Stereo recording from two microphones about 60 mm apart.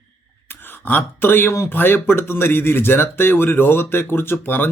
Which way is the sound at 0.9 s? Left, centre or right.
Left.